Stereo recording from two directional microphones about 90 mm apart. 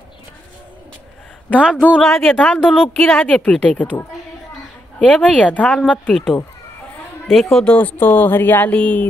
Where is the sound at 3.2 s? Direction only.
10° left (ahead or behind).